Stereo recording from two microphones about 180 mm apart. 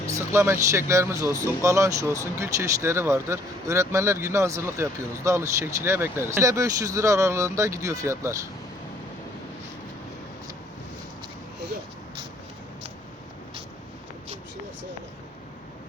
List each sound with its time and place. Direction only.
0.1 s speech: 15° right (ahead or behind)